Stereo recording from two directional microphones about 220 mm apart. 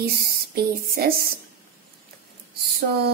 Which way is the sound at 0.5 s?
45° right (ahead or behind).